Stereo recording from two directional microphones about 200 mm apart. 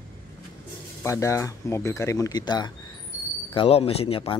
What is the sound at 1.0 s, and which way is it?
Speech, 15° left (ahead or behind).